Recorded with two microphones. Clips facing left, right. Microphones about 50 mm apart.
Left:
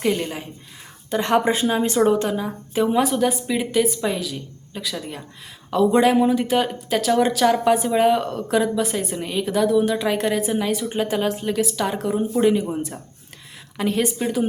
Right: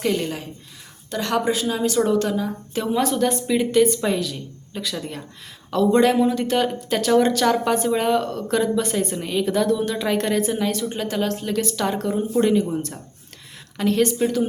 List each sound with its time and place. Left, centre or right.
0.0 s speech: centre
1.1 s speech: left; by 14.4 s centre